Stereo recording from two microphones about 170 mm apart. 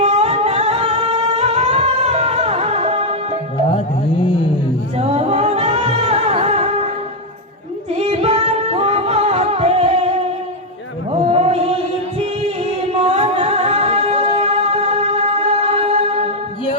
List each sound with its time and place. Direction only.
0.0 s music: 40° right (ahead or behind)
3.8 s music: 30° left (ahead or behind)
4.9 s music: 40° right (ahead or behind)
7.9 s music: 35° right (ahead or behind)
11.3 s chant: 35° right (ahead or behind)
12.2 s music: 40° right (ahead or behind)